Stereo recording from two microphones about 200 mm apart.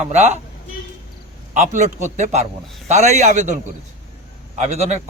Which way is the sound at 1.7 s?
35° right (ahead or behind).